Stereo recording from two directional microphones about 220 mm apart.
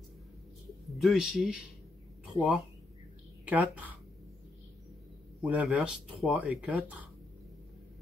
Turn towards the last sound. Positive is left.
turn(degrees=-5)  # may be behind; listen again after turning